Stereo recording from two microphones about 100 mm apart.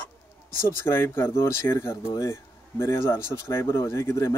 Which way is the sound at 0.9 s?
25° left (ahead or behind).